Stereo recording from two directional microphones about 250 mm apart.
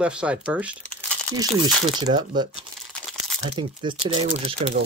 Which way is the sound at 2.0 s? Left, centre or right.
Centre.